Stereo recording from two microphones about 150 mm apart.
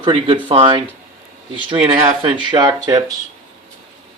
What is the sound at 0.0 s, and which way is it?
Speech, 35° right (ahead or behind).